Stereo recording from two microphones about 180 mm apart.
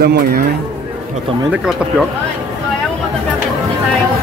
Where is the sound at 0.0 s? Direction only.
65° right (ahead or behind).